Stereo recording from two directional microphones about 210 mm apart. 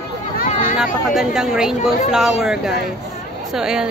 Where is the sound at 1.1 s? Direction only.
5° right (ahead or behind).